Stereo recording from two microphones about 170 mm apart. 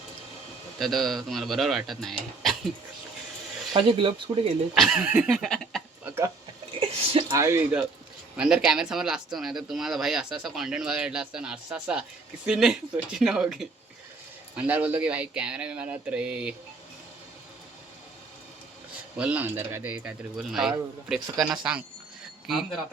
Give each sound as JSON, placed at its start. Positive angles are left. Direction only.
{"t": 0.8, "sound": "speech", "side_deg": 0}
{"t": 3.8, "sound": "speech", "side_deg": -30}
{"t": 4.7, "sound": "speech", "side_deg": 0}
{"t": 6.1, "sound": "speech", "side_deg": -15}
{"t": 6.7, "sound": "a sound", "side_deg": -30}
{"t": 7.3, "sound": "speech", "side_deg": -15}
{"t": 19.1, "sound": "speech", "side_deg": -10}